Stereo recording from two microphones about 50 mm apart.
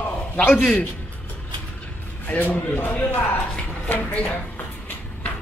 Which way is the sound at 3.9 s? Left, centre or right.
Left.